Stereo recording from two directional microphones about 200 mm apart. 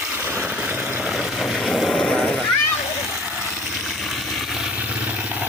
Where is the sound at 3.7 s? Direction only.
Centre (ahead or behind).